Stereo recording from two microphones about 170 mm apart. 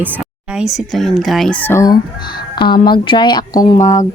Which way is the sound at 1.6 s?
15° left (ahead or behind).